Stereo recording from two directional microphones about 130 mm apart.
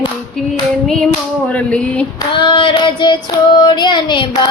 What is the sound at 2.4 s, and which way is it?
Carnatic music, 40° left (ahead or behind).